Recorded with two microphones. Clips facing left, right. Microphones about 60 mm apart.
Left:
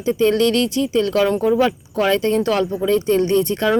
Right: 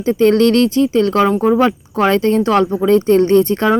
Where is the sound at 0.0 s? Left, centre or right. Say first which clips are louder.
Right 4 dB; right.